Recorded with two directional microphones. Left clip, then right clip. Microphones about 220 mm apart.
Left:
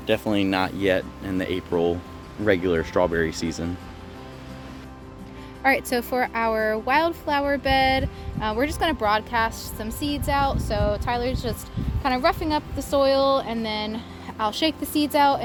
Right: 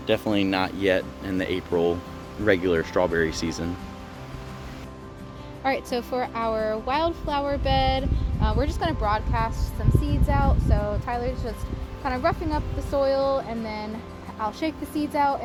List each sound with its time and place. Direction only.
0.1 s speech: 15° left (ahead or behind)
5.6 s a woman's voice: 35° left (ahead or behind)